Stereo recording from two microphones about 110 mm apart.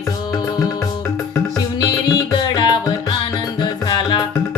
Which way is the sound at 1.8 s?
35° left (ahead or behind).